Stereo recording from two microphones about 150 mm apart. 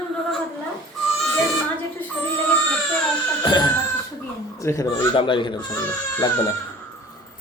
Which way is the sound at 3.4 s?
30° left (ahead or behind).